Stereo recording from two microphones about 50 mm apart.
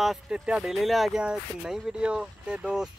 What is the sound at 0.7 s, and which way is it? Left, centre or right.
Speech, centre.